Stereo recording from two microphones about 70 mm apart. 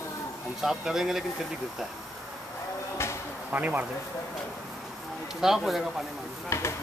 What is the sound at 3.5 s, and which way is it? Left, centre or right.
Speech, right.